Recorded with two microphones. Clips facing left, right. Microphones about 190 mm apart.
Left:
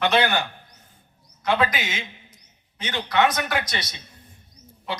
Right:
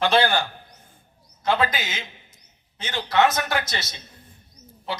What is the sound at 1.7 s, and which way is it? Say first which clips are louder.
A man's voice: left 1 dB; 25° right (ahead or behind).